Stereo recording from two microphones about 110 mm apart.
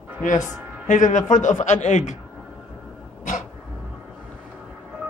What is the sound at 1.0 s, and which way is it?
A man's voice, 90° left.